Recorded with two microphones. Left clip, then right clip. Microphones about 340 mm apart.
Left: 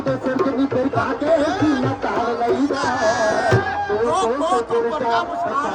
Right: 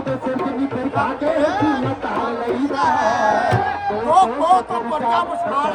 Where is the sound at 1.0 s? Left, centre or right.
Centre.